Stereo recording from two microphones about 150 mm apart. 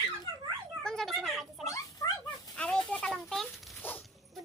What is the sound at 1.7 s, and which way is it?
Dog, 20° left (ahead or behind).